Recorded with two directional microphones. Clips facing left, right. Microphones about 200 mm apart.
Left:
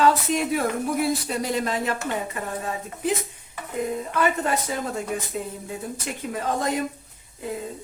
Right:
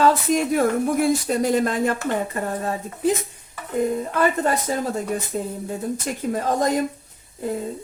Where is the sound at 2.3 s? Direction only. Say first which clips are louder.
Right 4 dB; 40° right (ahead or behind).